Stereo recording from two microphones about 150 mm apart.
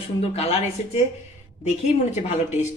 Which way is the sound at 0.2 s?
40° left (ahead or behind).